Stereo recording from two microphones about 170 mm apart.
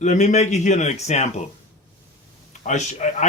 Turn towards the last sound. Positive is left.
turn(degrees=45)  # may be behind; listen again after turning